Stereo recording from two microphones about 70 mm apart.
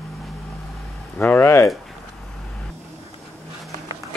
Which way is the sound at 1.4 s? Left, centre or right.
Left.